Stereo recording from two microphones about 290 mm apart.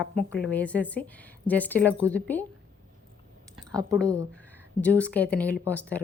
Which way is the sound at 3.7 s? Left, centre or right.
Centre.